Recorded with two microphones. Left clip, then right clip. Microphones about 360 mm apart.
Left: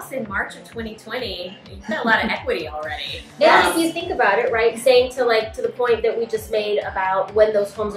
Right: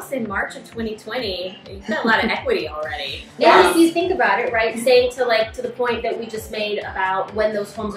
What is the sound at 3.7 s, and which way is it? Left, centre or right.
A woman's voice, centre.